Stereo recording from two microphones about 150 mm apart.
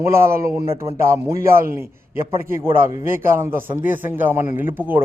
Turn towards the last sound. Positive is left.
turn(degrees=-15)  # may be behind; listen again after turning